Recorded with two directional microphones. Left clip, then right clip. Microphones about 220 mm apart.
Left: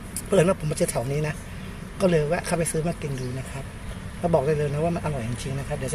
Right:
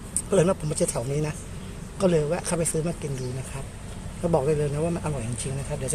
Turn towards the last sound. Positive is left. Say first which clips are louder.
# left 1 dB
turn(degrees=-5)  # may be behind; listen again after turning